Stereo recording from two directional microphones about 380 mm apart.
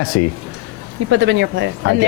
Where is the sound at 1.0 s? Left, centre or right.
Right.